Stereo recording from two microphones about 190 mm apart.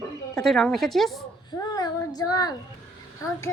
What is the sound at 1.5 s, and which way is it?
Child singing, 20° left (ahead or behind).